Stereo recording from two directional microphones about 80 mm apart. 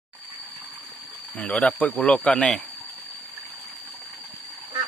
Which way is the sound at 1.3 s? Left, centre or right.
Centre.